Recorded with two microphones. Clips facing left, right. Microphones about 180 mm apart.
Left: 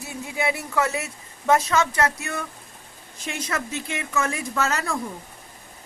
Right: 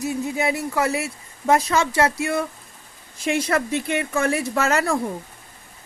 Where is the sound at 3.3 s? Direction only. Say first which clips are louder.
Right 7 dB; 35° right (ahead or behind).